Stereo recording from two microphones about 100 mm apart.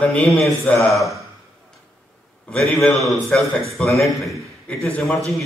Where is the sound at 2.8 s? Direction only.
Centre (ahead or behind).